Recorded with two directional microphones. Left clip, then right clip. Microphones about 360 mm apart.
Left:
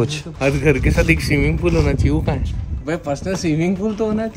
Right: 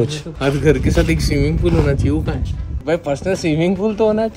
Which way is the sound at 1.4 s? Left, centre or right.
Left.